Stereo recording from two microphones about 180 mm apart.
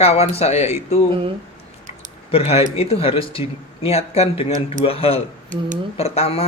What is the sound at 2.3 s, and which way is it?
Speech, 35° left (ahead or behind).